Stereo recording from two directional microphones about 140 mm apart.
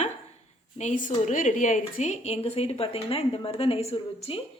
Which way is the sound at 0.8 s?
65° left (ahead or behind).